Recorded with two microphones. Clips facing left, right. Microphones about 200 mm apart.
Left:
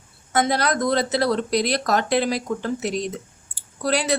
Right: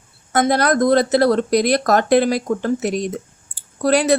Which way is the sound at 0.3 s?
50° right (ahead or behind).